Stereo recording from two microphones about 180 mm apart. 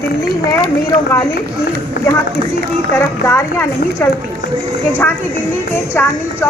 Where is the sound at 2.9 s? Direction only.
15° left (ahead or behind).